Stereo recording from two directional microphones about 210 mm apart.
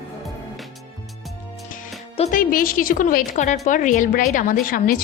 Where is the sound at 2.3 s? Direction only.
40° left (ahead or behind).